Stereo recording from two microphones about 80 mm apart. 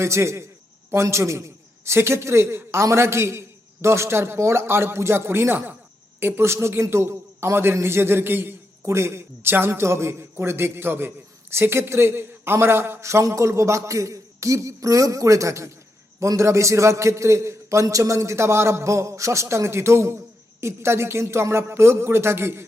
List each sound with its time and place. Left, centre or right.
0.0 s a man's voice: right